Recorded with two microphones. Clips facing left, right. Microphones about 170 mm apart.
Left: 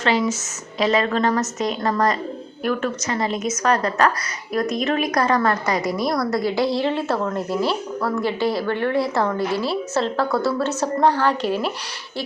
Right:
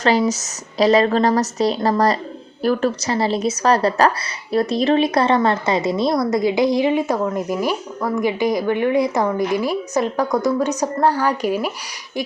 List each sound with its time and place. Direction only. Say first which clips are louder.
0.0 s a woman's voice: right 3 dB; 40° right (ahead or behind); by 11.7 s 10° right (ahead or behind)